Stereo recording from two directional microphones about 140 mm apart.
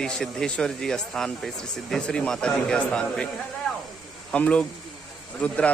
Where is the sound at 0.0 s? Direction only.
5° left (ahead or behind).